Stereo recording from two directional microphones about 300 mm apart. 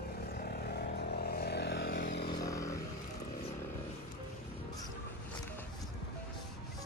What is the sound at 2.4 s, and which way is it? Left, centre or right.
Vehicle, centre.